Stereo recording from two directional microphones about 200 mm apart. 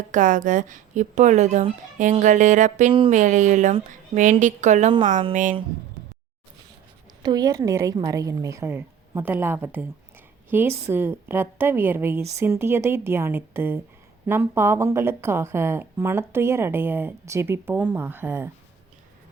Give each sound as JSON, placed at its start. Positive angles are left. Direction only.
{"t": 0.1, "sound": "speech", "side_deg": -40}
{"t": 7.2, "sound": "a woman's voice", "side_deg": -20}